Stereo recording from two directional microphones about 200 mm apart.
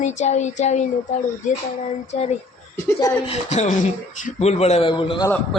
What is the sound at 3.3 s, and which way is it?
Speech, 35° left (ahead or behind).